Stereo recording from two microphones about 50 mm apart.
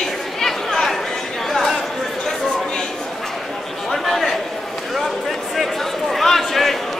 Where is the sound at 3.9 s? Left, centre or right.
Centre.